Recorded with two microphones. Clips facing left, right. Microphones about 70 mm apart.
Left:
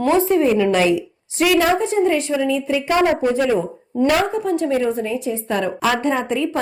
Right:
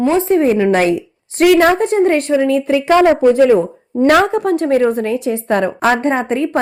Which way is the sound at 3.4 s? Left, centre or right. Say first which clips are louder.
Right 8 dB; right.